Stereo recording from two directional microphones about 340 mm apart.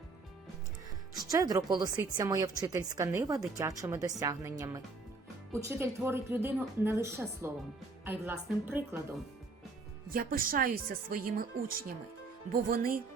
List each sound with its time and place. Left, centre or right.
1.3 s a woman's voice: centre
10.1 s speech: right
12.6 s speech: right